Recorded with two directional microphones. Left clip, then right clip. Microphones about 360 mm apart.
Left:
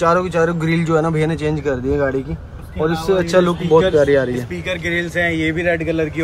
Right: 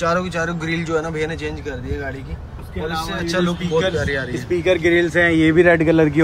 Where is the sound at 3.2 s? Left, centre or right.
Centre.